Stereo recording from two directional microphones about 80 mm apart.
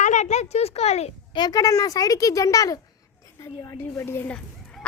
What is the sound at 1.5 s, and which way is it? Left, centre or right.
Speech, left.